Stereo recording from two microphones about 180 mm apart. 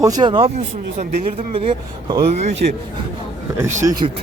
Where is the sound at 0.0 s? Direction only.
20° right (ahead or behind); by 2.6 s 40° right (ahead or behind).